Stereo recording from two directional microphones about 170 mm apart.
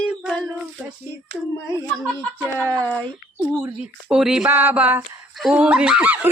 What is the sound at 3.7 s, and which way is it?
Speech, 5° right (ahead or behind).